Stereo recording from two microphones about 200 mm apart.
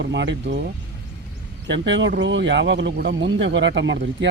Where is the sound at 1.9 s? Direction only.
65° right (ahead or behind).